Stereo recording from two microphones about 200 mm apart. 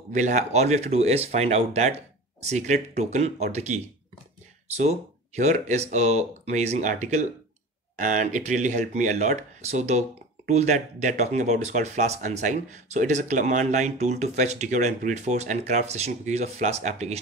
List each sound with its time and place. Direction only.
0.1 s speech: 35° right (ahead or behind)